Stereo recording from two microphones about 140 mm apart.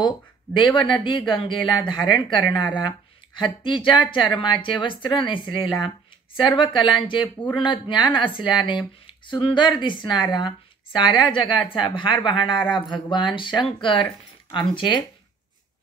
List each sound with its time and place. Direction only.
0.6 s speech: 35° left (ahead or behind)